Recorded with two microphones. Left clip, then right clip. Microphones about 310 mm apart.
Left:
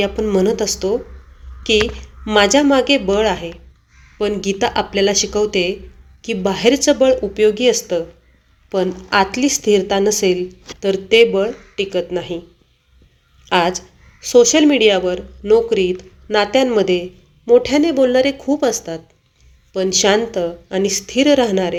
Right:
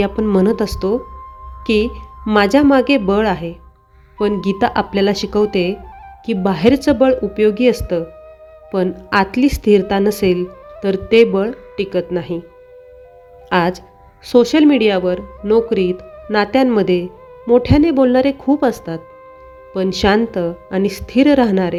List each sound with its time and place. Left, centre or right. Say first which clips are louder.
0.0 s a woman's voice: even; right
13.5 s a woman's voice: even; right